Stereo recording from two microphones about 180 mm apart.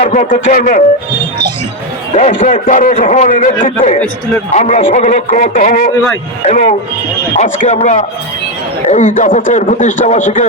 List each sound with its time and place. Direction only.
0.0 s a man's voice: 40° left (ahead or behind)
2.1 s a man's voice: 40° left (ahead or behind)
7.3 s a man's voice: 45° left (ahead or behind)